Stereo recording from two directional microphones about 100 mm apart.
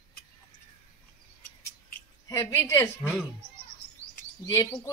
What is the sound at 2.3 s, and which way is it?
Speech, 30° left (ahead or behind).